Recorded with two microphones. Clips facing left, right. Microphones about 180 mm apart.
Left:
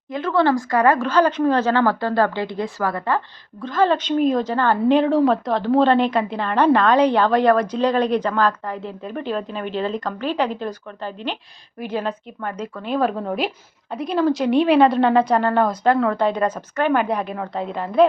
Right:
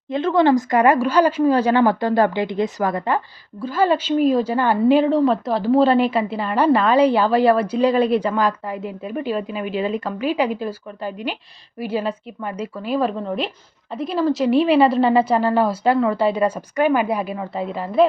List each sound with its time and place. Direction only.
0.1 s a woman's voice: 25° right (ahead or behind); by 18.0 s 5° right (ahead or behind)